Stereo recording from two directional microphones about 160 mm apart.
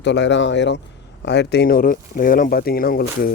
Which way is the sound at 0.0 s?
90° left.